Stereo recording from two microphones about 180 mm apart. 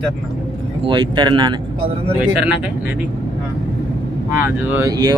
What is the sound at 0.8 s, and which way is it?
Speech, 25° right (ahead or behind).